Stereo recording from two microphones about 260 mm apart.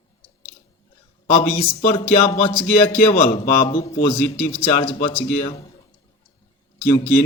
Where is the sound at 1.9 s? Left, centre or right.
Left.